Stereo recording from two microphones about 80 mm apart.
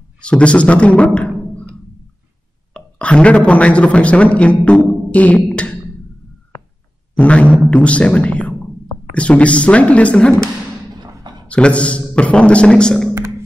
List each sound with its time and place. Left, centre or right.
0.2 s a man's voice: centre
2.7 s a man's voice: centre
7.2 s speech: centre
11.4 s a man's voice: centre